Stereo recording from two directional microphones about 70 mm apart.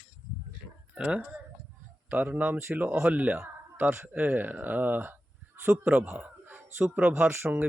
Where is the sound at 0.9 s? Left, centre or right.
Centre.